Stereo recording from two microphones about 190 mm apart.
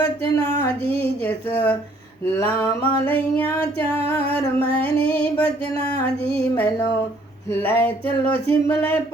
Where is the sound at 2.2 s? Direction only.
15° left (ahead or behind).